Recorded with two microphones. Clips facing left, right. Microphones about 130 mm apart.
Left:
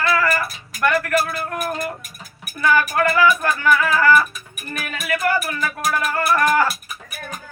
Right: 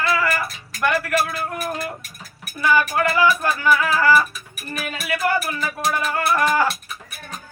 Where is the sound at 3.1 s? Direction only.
25° right (ahead or behind).